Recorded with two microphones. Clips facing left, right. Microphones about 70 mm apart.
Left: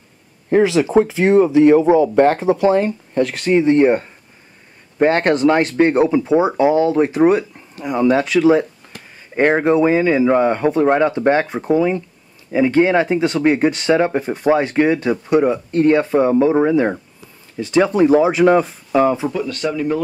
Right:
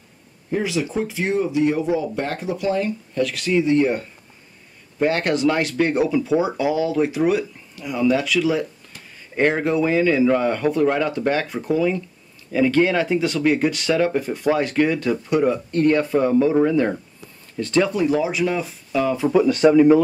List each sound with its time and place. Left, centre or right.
0.5 s speech: left
2.0 s speech: left
2.3 s speech: left; by 17.8 s centre
17.8 s speech: left
19.3 s speech: centre